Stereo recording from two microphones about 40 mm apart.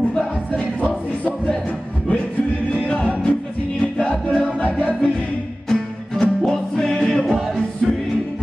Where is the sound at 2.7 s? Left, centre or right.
Left.